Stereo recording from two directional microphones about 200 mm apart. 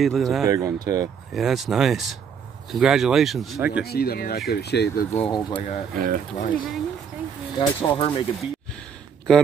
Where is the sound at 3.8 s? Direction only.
50° left (ahead or behind).